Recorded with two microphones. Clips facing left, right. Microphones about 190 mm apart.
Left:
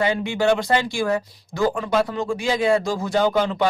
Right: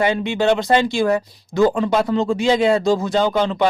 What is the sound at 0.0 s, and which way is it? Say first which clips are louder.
Speech: right 2 dB; 20° right (ahead or behind).